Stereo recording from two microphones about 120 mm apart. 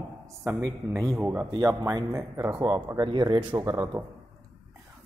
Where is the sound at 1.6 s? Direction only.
30° right (ahead or behind).